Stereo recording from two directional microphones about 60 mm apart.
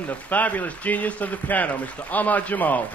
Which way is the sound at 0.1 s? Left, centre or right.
Left.